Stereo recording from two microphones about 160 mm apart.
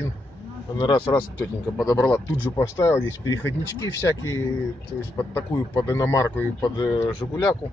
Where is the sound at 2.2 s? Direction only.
20° left (ahead or behind).